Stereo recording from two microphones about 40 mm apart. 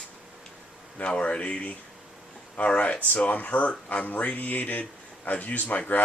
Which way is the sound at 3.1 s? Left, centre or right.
Left.